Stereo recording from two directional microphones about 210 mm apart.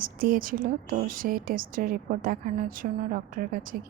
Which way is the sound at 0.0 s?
40° right (ahead or behind).